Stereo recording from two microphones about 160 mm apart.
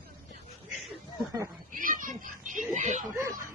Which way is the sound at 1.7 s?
55° right (ahead or behind).